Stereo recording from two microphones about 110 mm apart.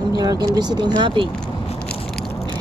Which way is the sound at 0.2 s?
35° right (ahead or behind).